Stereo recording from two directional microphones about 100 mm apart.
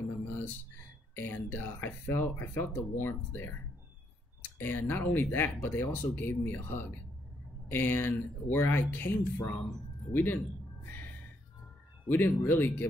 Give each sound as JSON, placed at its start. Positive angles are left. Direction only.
{"t": 1.1, "sound": "speech", "side_deg": 25}
{"t": 12.1, "sound": "speech", "side_deg": 20}